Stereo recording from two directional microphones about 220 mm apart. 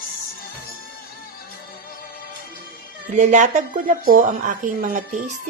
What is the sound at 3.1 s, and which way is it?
Speech, 35° right (ahead or behind).